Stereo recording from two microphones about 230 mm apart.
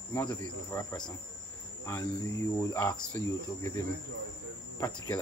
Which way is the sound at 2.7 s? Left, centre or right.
Centre.